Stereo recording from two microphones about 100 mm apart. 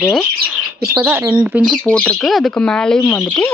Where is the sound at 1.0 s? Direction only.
15° right (ahead or behind).